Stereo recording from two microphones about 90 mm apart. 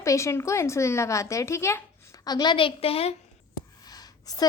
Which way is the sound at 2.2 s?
50° left (ahead or behind).